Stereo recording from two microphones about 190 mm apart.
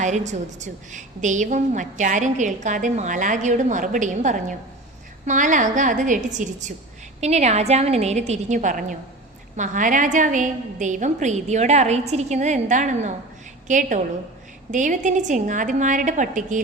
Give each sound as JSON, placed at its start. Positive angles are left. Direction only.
{"t": 0.0, "sound": "a woman's voice", "side_deg": -40}